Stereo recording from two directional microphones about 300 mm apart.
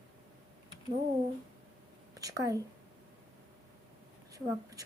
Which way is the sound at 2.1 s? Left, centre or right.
Centre.